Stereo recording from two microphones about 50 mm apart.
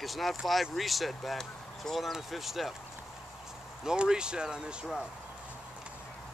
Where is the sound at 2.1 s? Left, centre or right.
Centre.